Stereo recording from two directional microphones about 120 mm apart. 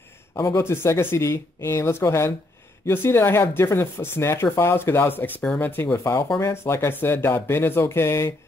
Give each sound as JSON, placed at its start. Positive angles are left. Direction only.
{"t": 0.6, "sound": "speech", "side_deg": 20}